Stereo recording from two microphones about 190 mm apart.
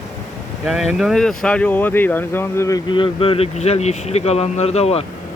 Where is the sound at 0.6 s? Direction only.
Centre (ahead or behind).